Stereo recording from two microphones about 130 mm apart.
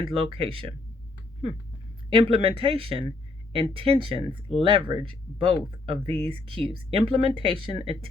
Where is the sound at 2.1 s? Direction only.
45° right (ahead or behind).